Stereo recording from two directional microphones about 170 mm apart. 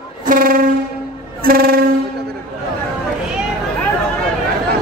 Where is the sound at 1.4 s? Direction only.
60° right (ahead or behind).